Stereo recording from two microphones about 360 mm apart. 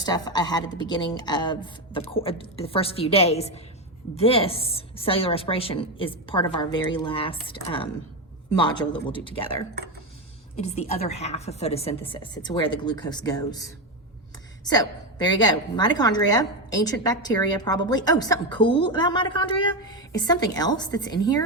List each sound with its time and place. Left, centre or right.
0.0 s a woman's voice: centre